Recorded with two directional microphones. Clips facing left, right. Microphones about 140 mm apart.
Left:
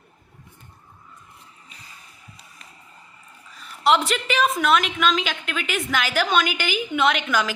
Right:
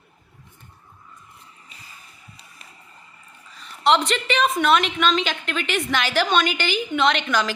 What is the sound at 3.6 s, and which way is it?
A woman's voice, 5° left (ahead or behind).